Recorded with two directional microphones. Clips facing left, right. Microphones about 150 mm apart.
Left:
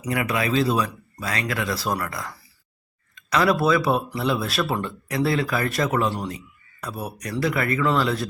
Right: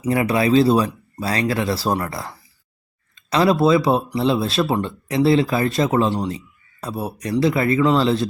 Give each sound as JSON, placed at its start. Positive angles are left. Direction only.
{"t": 0.0, "sound": "speech", "side_deg": -30}